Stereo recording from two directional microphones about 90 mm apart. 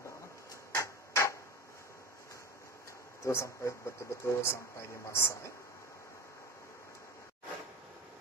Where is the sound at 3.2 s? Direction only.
35° left (ahead or behind).